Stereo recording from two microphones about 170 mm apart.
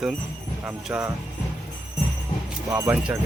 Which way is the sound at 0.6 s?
15° right (ahead or behind).